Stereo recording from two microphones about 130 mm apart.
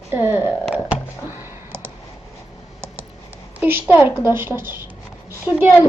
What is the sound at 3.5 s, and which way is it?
Speech, 15° right (ahead or behind).